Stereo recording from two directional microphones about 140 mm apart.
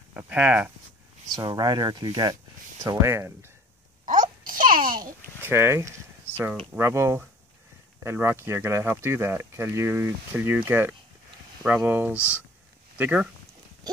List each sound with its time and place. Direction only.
0.2 s speech: 10° right (ahead or behind)
1.3 s speech: 30° right (ahead or behind)
4.1 s babbling: 75° right (ahead or behind); by 5.0 s 90° right
5.4 s a sound: 15° right (ahead or behind)
6.7 s speech: 20° right (ahead or behind)